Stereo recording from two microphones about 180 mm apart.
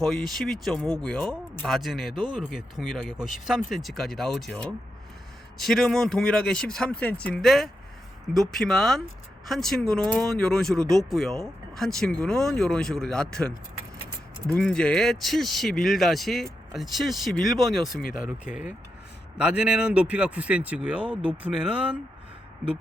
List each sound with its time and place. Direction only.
0.0 s speech: centre (ahead or behind)
14.5 s speech: 5° left (ahead or behind)
18.0 s speech: 50° left (ahead or behind)
18.3 s speech: 5° right (ahead or behind)